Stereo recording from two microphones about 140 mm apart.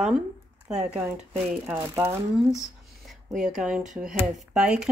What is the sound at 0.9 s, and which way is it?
Speech, 10° right (ahead or behind).